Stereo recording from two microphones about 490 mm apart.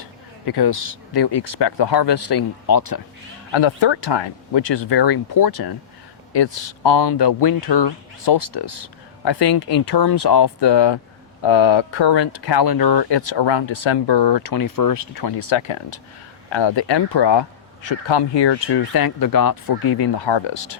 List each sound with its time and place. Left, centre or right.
0.4 s speech: left
3.5 s speech: left
9.2 s speech: left
11.4 s speech: left
15.4 s speech: left
16.5 s speech: left